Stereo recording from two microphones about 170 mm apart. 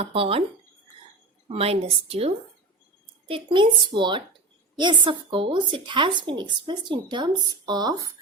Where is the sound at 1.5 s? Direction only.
35° right (ahead or behind).